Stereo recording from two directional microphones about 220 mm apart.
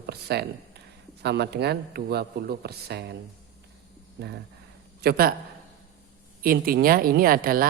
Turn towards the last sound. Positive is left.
turn(degrees=-40)  # may be behind; listen again after turning